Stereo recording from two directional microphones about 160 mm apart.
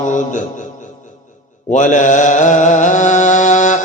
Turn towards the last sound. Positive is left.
turn(degrees=50)  # may be behind; listen again after turning